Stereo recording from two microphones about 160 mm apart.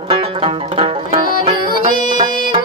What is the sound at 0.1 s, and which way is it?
Banjo, 30° right (ahead or behind).